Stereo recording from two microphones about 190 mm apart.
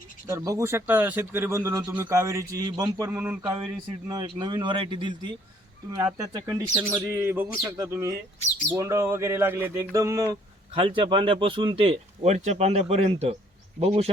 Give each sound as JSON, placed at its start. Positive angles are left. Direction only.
{"t": 0.3, "sound": "speech", "side_deg": -15}
{"t": 6.1, "sound": "speech", "side_deg": -20}
{"t": 10.8, "sound": "a man's voice", "side_deg": -25}